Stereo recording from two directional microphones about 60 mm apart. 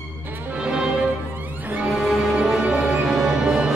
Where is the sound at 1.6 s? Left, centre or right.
Right.